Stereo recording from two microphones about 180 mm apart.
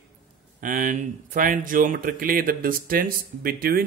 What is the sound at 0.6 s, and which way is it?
Speech, 50° right (ahead or behind).